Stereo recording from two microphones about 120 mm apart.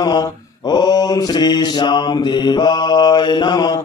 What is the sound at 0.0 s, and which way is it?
Mantra, 35° left (ahead or behind).